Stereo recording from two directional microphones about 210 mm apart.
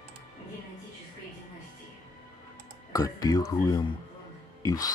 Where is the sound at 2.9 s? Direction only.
15° left (ahead or behind).